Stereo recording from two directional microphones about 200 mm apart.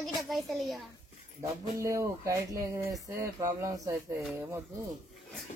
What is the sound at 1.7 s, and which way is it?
Speech, 15° right (ahead or behind).